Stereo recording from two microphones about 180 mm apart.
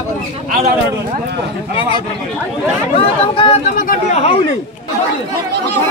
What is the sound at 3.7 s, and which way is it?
Speech, 50° left (ahead or behind).